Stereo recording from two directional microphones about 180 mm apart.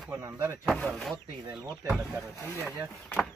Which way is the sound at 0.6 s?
5° left (ahead or behind).